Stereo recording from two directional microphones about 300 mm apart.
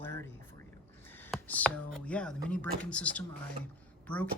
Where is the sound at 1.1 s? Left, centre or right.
Centre.